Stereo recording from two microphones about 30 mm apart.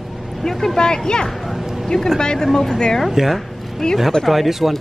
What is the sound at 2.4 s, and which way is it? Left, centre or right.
Speech, centre.